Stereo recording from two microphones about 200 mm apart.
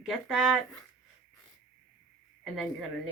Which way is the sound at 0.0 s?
Centre (ahead or behind).